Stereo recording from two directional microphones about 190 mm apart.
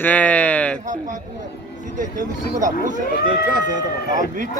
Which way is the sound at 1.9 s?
40° right (ahead or behind).